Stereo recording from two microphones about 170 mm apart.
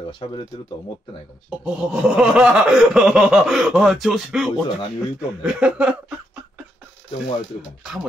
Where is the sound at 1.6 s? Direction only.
5° right (ahead or behind).